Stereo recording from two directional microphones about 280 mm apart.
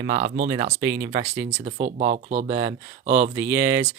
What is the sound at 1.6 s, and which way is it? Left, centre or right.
Speech, right.